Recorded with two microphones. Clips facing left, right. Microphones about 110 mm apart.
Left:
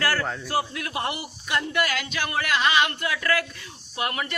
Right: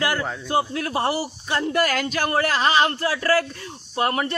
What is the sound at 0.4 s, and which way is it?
A man's voice, 30° right (ahead or behind).